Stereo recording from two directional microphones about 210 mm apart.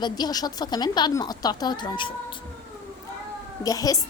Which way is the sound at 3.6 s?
15° left (ahead or behind).